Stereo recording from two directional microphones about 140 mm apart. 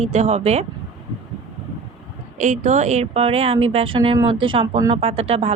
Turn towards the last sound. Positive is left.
turn(degrees=-45)  # may be behind; listen again after turning